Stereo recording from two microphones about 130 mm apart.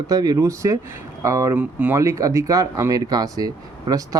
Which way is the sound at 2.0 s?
25° right (ahead or behind).